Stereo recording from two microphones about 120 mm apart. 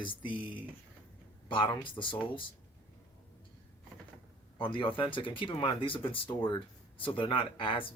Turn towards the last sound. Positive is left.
turn(degrees=45)  # may be behind; listen again after turning